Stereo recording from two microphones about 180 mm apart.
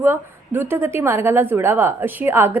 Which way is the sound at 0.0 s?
15° right (ahead or behind).